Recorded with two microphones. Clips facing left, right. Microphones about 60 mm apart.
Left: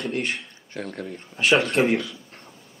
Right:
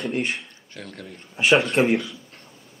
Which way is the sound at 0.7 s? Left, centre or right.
Left.